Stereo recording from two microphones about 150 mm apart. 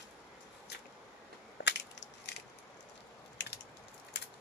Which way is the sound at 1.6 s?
90° left.